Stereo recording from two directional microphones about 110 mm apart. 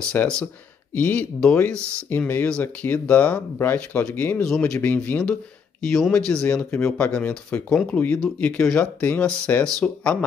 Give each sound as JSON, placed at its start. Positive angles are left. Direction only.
{"t": 0.2, "sound": "speech", "side_deg": 15}